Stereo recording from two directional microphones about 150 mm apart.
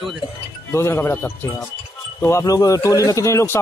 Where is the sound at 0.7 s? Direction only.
15° left (ahead or behind).